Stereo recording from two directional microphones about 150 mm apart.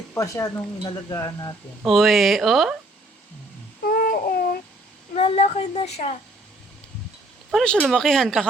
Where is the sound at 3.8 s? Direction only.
70° left (ahead or behind).